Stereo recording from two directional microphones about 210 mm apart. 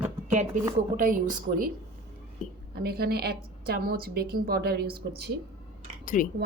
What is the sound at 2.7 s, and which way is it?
A woman's voice, 45° right (ahead or behind).